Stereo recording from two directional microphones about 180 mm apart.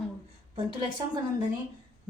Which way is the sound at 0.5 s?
30° right (ahead or behind).